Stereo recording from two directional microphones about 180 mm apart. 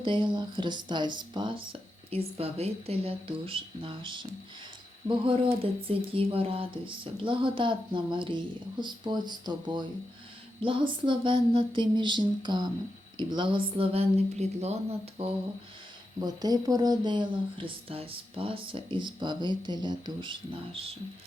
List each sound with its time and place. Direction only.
0.0 s speech: 25° right (ahead or behind)
16.2 s speech: 20° right (ahead or behind)